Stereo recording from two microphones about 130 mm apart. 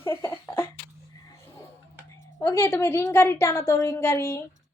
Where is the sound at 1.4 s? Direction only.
20° left (ahead or behind).